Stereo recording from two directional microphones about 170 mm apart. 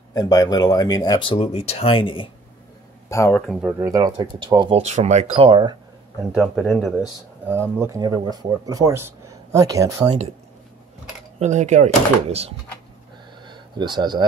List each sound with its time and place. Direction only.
0.1 s speech: 20° left (ahead or behind)
3.1 s speech: 15° left (ahead or behind)
3.3 s speech: centre (ahead or behind)
3.8 s speech: 20° right (ahead or behind)
6.3 s speech: centre (ahead or behind)
7.4 s speech: 15° right (ahead or behind)
11.3 s speech: 45° right (ahead or behind)
13.5 s a sound: 25° right (ahead or behind)